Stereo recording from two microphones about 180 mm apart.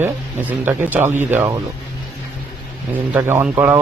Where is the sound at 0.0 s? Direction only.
10° right (ahead or behind).